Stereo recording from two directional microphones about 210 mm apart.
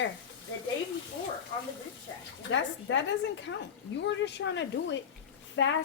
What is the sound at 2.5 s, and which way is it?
Speech, 60° left (ahead or behind).